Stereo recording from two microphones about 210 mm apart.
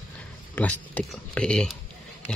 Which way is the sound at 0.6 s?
5° left (ahead or behind).